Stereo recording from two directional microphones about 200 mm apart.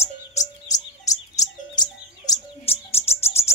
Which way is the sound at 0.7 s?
15° left (ahead or behind).